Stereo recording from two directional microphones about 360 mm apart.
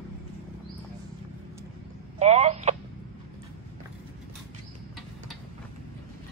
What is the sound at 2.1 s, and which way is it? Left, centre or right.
Telephone, centre.